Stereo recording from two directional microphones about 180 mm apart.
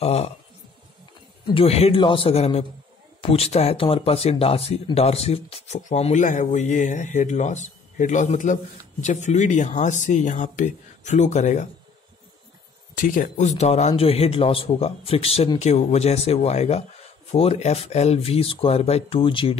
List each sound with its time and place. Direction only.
0.0 s speech: 35° left (ahead or behind)
1.5 s speech: 35° left (ahead or behind)
12.9 s speech: 50° left (ahead or behind); by 19.6 s 30° left (ahead or behind)